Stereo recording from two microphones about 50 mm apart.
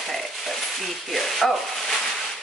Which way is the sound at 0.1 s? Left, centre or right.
Centre.